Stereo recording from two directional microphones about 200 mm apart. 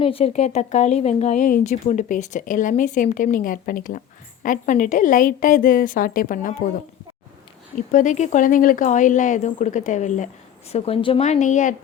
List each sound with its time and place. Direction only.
0.0 s speech: 30° left (ahead or behind)
7.9 s speech: 40° left (ahead or behind)